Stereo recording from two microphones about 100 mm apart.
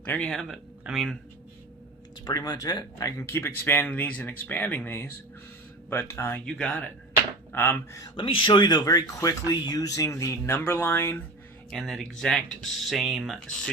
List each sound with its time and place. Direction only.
0.0 s speech: 20° left (ahead or behind)
0.3 s speech: 5° left (ahead or behind)
2.2 s speech: 40° left (ahead or behind)
3.2 s speech: 25° left (ahead or behind)
6.4 s speech: 10° left (ahead or behind)
7.9 s speech: 40° left (ahead or behind)
8.2 s speech: 60° left (ahead or behind); by 11.2 s 20° left (ahead or behind)
11.7 s speech: centre (ahead or behind)